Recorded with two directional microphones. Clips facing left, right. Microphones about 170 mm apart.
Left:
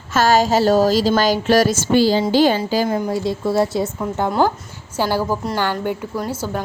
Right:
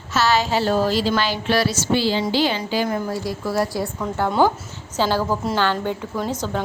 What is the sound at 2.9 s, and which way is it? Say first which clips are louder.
A woman's voice: left 4 dB; 25° left (ahead or behind).